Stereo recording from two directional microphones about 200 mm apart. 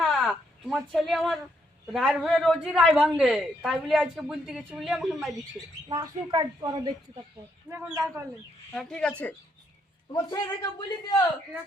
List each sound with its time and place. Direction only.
0.0 s a sound: centre (ahead or behind)
1.9 s a woman's voice: centre (ahead or behind)
5.9 s a woman's voice: 20° right (ahead or behind)
7.7 s speech: 10° right (ahead or behind)
8.7 s a woman's voice: 5° left (ahead or behind)
10.1 s a man's voice: 20° left (ahead or behind)